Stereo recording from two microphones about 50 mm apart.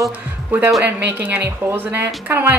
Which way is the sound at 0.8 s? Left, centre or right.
Right.